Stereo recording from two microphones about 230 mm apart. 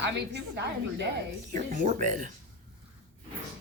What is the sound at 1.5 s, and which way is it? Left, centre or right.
Speech, right.